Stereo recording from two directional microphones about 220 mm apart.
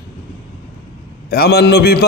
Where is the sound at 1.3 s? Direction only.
45° left (ahead or behind).